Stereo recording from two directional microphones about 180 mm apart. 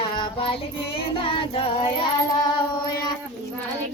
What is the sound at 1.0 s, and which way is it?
Child singing, 30° left (ahead or behind).